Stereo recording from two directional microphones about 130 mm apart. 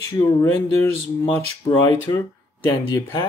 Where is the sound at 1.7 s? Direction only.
35° left (ahead or behind).